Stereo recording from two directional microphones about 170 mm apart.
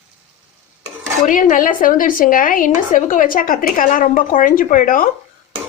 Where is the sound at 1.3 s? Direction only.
50° left (ahead or behind).